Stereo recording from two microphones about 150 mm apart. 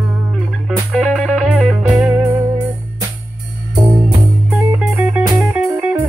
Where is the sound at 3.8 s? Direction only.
10° right (ahead or behind).